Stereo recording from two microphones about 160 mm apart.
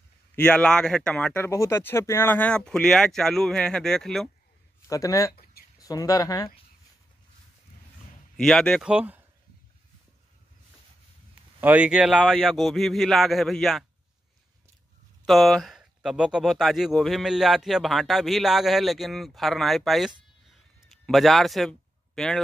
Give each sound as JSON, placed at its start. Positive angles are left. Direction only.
{"t": 0.4, "sound": "speech", "side_deg": 5}
{"t": 4.8, "sound": "speech", "side_deg": 20}
{"t": 5.3, "sound": "a sound", "side_deg": 70}
{"t": 5.8, "sound": "speech", "side_deg": 20}
{"t": 8.4, "sound": "speech", "side_deg": 5}
{"t": 8.8, "sound": "speech", "side_deg": -10}
{"t": 11.6, "sound": "speech", "side_deg": -10}
{"t": 15.2, "sound": "speech", "side_deg": 0}